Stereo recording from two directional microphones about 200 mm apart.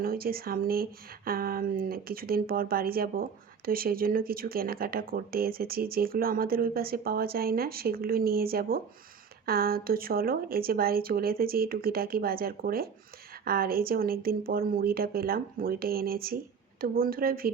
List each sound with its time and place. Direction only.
0.0 s speech: 50° right (ahead or behind)